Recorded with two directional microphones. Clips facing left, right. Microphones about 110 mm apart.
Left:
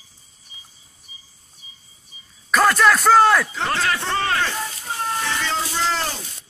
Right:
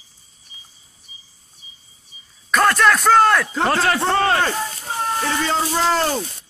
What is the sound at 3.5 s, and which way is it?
Speech, 40° right (ahead or behind).